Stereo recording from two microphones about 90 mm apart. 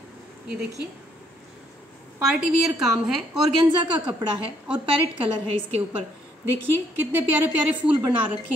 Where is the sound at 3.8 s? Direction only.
55° right (ahead or behind).